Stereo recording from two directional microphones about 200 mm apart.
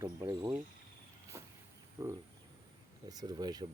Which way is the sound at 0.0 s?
15° right (ahead or behind).